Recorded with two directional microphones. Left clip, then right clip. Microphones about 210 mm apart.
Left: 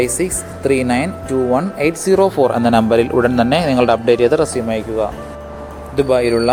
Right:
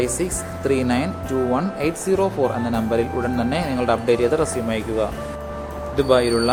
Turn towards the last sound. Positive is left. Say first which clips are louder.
# left 3 dB
turn(degrees=20)  # may be behind; listen again after turning